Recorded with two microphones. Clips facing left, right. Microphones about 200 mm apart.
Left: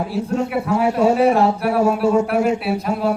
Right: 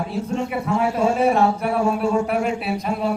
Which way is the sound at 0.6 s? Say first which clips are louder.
Left 4 dB; 20° left (ahead or behind).